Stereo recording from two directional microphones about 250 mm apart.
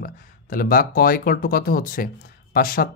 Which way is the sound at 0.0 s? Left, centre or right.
Left.